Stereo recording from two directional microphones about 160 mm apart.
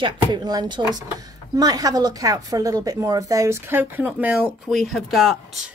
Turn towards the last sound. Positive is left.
turn(degrees=0)  # may be behind; listen again after turning